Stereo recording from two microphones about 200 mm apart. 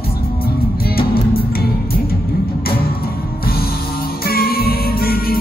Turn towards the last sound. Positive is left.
turn(degrees=50)  # may be behind; listen again after turning